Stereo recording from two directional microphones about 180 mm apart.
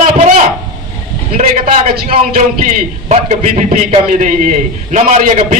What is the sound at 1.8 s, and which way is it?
A man's voice, 50° right (ahead or behind).